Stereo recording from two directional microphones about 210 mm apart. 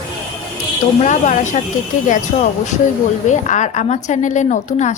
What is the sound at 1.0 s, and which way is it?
Speech, 35° left (ahead or behind).